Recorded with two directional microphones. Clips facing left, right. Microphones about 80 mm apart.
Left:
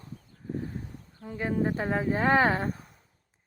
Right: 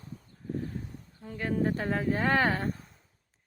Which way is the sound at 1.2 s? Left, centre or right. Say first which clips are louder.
Left 1 dB; centre.